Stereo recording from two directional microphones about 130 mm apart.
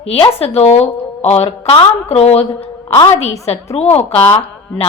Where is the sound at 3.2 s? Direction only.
55° left (ahead or behind).